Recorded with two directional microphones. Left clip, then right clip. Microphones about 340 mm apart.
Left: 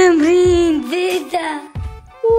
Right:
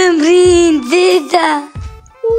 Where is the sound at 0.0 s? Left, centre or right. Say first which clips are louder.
Right 3 dB; centre.